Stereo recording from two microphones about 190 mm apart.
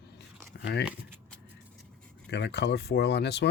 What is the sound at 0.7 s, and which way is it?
Speech, 60° left (ahead or behind).